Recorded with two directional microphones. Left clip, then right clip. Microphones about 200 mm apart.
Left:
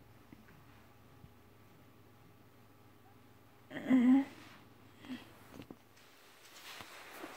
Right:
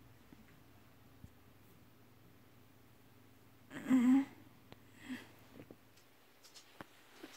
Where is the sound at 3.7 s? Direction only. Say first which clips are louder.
Left 2 dB; 25° right (ahead or behind).